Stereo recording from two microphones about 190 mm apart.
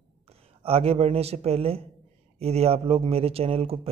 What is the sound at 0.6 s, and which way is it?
A man's voice, 30° right (ahead or behind).